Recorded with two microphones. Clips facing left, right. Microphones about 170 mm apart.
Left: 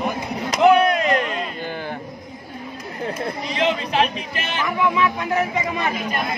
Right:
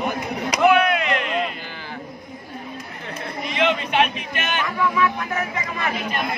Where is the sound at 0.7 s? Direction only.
40° left (ahead or behind).